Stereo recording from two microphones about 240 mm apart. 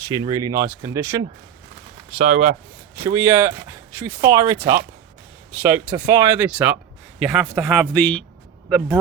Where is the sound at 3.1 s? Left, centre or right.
Centre.